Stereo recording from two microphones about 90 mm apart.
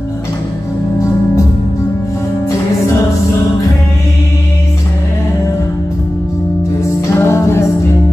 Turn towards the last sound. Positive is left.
turn(degrees=30)  # may be behind; listen again after turning